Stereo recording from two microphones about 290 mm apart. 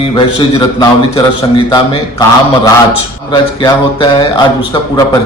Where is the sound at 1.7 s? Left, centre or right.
Centre.